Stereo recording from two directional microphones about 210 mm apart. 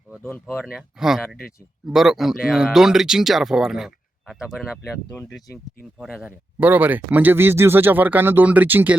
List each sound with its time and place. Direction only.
0.3 s speech: 5° left (ahead or behind)
6.0 s speech: centre (ahead or behind)